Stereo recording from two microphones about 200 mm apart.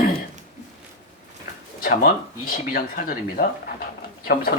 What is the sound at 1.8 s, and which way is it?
Speech, 45° left (ahead or behind).